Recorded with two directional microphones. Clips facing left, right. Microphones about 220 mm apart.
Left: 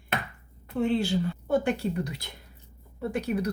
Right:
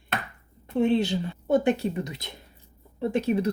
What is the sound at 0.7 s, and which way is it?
Speech, 20° right (ahead or behind).